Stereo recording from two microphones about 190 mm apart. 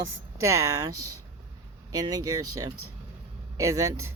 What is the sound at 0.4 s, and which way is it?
Speech, 15° right (ahead or behind).